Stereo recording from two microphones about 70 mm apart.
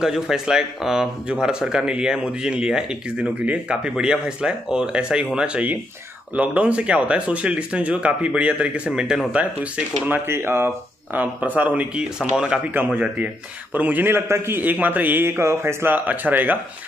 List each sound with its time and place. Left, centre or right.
0.0 s speech: centre; by 10.2 s right
10.2 s speech: right
11.1 s speech: right
14.6 s speech: right
15.9 s speech: right